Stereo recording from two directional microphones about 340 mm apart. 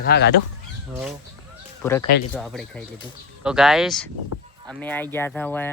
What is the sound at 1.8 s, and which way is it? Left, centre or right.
Speech, centre.